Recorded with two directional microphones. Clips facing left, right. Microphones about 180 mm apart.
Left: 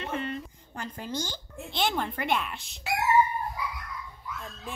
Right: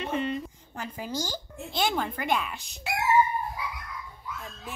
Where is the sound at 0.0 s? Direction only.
15° right (ahead or behind).